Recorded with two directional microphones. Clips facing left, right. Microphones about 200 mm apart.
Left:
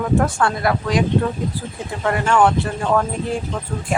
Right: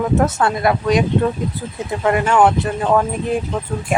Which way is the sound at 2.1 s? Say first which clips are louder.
Right 2 dB; 20° right (ahead or behind).